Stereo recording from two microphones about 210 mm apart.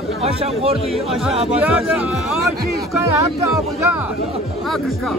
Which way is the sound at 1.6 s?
5° right (ahead or behind).